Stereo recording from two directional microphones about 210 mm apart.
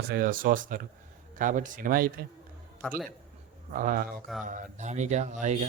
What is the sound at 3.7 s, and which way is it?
Speech, 40° right (ahead or behind).